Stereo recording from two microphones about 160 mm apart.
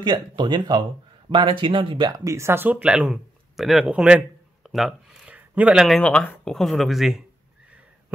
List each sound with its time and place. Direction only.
0.0 s speech: 30° right (ahead or behind); by 7.2 s centre (ahead or behind)